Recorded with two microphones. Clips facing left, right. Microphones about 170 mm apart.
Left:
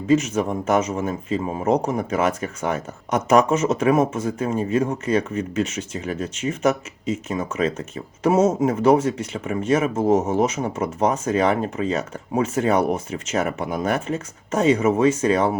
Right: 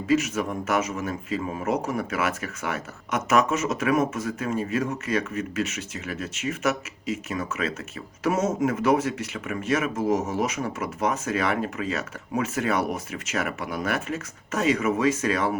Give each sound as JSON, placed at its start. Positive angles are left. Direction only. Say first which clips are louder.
{"t": 0.1, "sound": "speech", "louder": "left 4 dB", "side_deg": 30}